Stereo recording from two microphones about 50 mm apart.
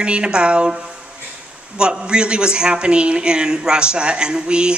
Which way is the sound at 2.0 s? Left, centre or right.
Centre.